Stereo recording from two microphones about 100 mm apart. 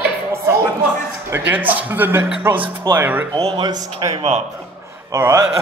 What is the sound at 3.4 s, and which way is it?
Speech, 70° right (ahead or behind).